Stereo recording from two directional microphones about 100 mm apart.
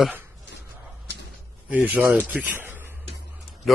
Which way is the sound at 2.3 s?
20° right (ahead or behind).